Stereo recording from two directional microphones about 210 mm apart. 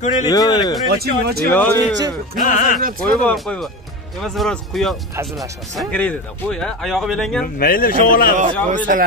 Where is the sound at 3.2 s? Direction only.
5° left (ahead or behind).